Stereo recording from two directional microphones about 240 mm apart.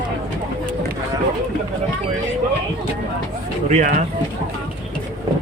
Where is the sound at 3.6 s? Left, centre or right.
Right.